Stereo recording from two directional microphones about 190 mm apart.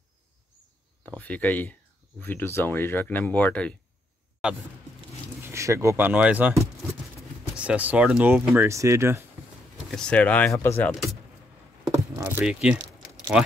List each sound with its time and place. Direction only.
1.1 s speech: 10° left (ahead or behind)
4.4 s speech: 5° right (ahead or behind)
5.4 s speech: 15° right (ahead or behind)
9.8 s speech: 5° left (ahead or behind)
11.9 s keys jangling: 15° right (ahead or behind)